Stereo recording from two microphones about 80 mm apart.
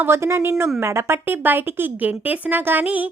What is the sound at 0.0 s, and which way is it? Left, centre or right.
A woman's voice, right.